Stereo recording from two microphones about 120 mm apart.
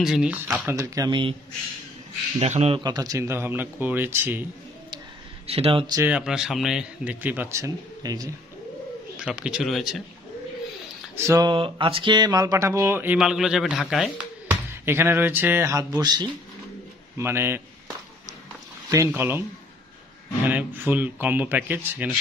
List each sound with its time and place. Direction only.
0.0 s speech: 5° right (ahead or behind)
0.7 s speech: 25° right (ahead or behind)
2.3 s speech: 70° right (ahead or behind)
2.8 s speech: 35° right (ahead or behind)
5.5 s speech: 55° right (ahead or behind)
6.0 s speech: 10° right (ahead or behind)
7.6 s speech: 30° right (ahead or behind)
9.1 s speech: 10° right (ahead or behind)
11.1 s speech: 25° right (ahead or behind)
11.4 s speech: 45° right (ahead or behind); by 13.2 s 15° right (ahead or behind)
13.2 s speech: 5° right (ahead or behind); by 16.3 s 35° right (ahead or behind)
17.2 s speech: 20° right (ahead or behind)
18.9 s speech: 25° right (ahead or behind)
20.4 s speech: 15° right (ahead or behind)